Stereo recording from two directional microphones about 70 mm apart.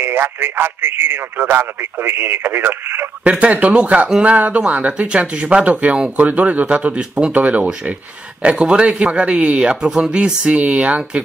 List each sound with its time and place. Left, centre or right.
0.0 s a man's voice: right
3.3 s speech: centre